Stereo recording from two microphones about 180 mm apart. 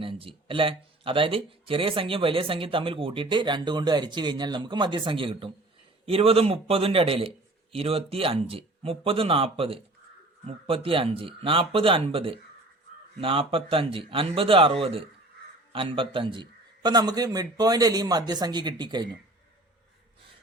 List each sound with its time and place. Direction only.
0.0 s speech: 30° right (ahead or behind)